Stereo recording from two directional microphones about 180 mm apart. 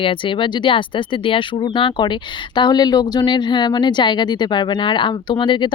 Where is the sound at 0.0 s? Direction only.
30° left (ahead or behind).